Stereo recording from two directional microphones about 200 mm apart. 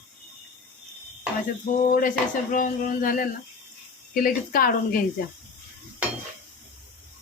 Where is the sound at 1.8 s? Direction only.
40° left (ahead or behind).